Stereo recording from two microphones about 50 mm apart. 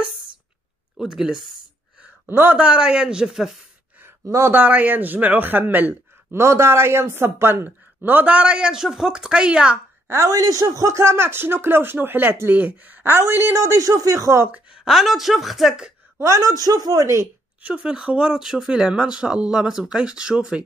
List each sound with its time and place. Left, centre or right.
0.9 s speech: centre
2.2 s a man's voice: right
2.5 s a man's voice: right
4.5 s speech: right
6.3 s speech: right
8.0 s speech: right
8.4 s speech: centre
10.0 s a woman's voice: right
10.9 s speech: right
13.0 s speech: right
14.9 s speech: centre
16.2 s a woman's voice: right
17.6 s speech: centre